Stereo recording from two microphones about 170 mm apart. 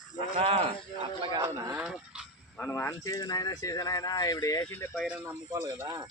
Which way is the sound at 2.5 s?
10° left (ahead or behind).